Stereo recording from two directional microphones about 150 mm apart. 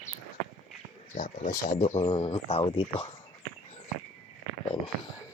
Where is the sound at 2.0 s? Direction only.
35° left (ahead or behind).